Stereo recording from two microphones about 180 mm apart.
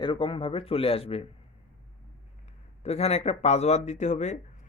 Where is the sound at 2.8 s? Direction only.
35° left (ahead or behind).